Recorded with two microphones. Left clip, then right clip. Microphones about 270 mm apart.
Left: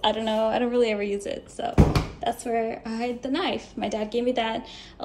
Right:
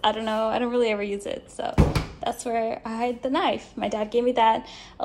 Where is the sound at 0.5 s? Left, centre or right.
Centre.